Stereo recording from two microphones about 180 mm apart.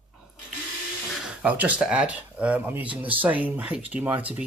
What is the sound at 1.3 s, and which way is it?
Speech, 5° right (ahead or behind).